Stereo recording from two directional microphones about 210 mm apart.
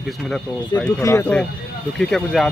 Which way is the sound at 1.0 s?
15° left (ahead or behind).